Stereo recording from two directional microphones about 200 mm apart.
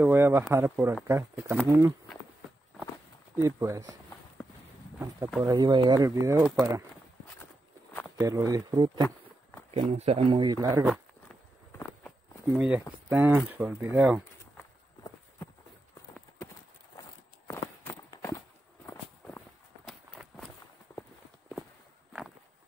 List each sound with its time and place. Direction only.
0.0 s speech: 10° right (ahead or behind)
3.4 s speech: 15° right (ahead or behind)
8.2 s speech: 20° right (ahead or behind)
9.8 s speech: 30° right (ahead or behind)
12.5 s speech: 5° right (ahead or behind)
17.5 s walk: 15° left (ahead or behind)